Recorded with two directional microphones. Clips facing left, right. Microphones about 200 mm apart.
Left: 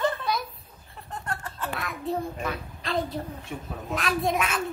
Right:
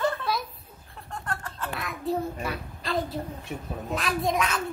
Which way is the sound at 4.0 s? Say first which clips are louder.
Left 1 dB; centre (ahead or behind).